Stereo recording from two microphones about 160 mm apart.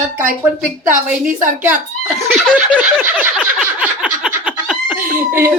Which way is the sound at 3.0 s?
10° right (ahead or behind).